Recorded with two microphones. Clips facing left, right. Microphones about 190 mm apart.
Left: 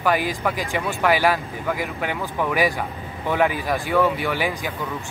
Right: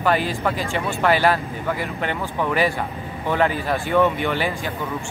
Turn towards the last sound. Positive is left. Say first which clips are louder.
# right 1 dB
turn(degrees=10)  # may be behind; listen again after turning